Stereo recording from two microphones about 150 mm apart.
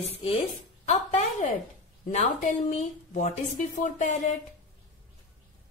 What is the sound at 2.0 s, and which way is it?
Speech, 55° left (ahead or behind).